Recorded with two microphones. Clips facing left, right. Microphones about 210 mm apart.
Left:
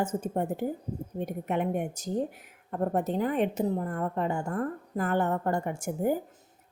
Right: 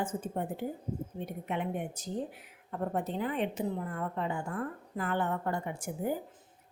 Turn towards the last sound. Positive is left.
turn(degrees=45)  # may be behind; listen again after turning